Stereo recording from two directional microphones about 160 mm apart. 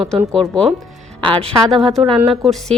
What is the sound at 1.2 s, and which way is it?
Speech, 30° right (ahead or behind).